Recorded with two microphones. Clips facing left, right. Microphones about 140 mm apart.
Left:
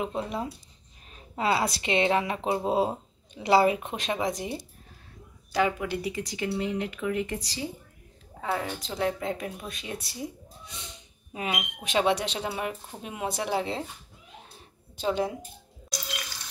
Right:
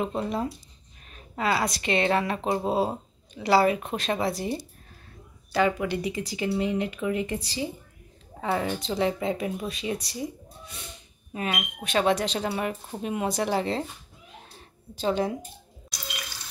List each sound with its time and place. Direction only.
0.0 s a woman's voice: 10° left (ahead or behind)
1.3 s a woman's voice: 25° left (ahead or behind); by 10.3 s 5° left (ahead or behind)
11.3 s a woman's voice: 15° left (ahead or behind)
15.0 s speech: 5° left (ahead or behind)